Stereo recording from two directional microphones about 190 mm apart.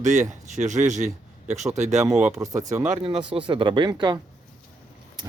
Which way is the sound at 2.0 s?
5° right (ahead or behind).